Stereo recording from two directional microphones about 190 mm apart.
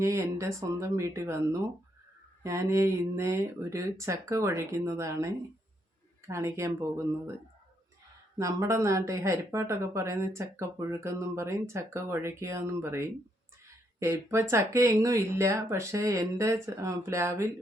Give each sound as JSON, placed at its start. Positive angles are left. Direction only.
{"t": 0.0, "sound": "speech", "side_deg": -15}
{"t": 8.4, "sound": "speech", "side_deg": -15}